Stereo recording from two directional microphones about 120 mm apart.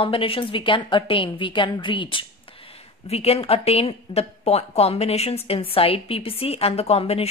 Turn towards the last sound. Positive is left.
turn(degrees=55)  # may be behind; listen again after turning